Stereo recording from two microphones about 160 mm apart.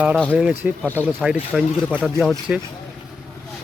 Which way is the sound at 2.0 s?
5° left (ahead or behind).